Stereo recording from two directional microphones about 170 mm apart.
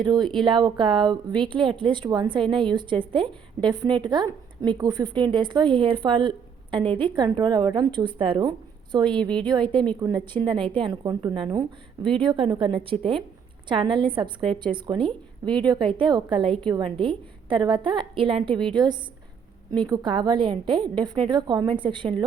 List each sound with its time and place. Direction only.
0.0 s speech: 25° right (ahead or behind)
9.1 s a woman's voice: 5° left (ahead or behind)
9.5 s speech: 30° right (ahead or behind)